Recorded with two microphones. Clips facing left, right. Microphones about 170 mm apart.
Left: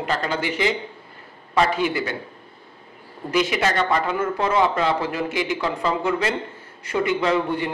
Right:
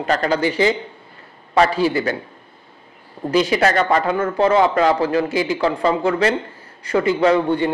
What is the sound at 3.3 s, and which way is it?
Speech, 30° right (ahead or behind).